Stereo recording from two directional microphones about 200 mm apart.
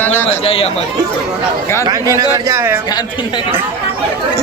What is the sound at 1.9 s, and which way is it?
Speech, 15° right (ahead or behind).